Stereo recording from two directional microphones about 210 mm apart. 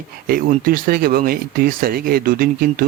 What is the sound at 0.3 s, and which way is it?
A man's voice, 45° right (ahead or behind).